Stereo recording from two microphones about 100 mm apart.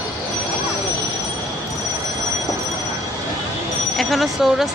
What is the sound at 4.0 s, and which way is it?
Speech, centre (ahead or behind).